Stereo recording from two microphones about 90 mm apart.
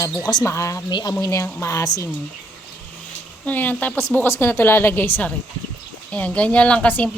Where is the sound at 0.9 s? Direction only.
45° left (ahead or behind).